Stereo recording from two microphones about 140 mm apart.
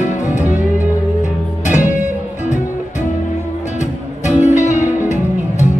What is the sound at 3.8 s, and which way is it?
Music, 60° left (ahead or behind).